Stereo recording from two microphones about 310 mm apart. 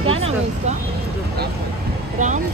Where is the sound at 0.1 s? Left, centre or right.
Centre.